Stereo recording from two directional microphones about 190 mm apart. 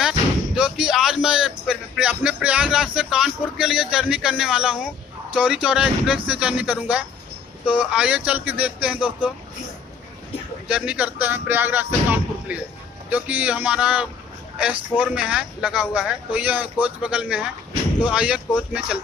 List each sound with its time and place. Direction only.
0.6 s a sound: 5° right (ahead or behind)
5.3 s speech: 5° right (ahead or behind)
10.7 s speech: 5° right (ahead or behind)